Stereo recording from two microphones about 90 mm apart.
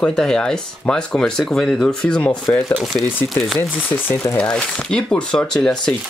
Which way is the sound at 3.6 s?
20° left (ahead or behind).